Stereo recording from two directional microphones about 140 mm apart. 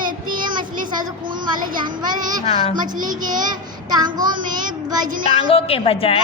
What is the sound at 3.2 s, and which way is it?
Music, 70° right (ahead or behind).